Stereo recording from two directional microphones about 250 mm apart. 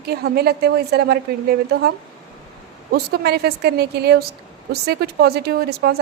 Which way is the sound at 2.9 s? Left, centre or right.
Right.